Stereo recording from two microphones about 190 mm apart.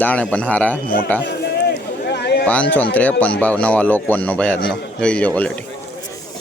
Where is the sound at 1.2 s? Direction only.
60° left (ahead or behind).